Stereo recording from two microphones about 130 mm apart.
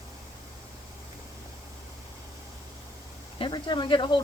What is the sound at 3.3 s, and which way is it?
Speech, 40° left (ahead or behind).